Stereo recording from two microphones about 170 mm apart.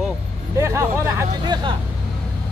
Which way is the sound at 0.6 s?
15° right (ahead or behind).